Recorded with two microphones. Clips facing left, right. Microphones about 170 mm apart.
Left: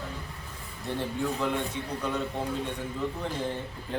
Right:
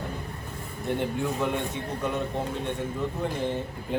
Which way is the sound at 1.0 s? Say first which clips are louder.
Even; 15° right (ahead or behind).